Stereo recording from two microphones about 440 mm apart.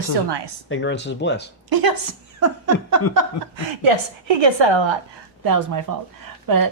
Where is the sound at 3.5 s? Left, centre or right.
Right.